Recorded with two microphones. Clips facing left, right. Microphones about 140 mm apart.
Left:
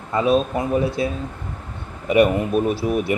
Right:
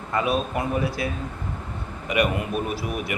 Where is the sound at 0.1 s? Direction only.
25° left (ahead or behind).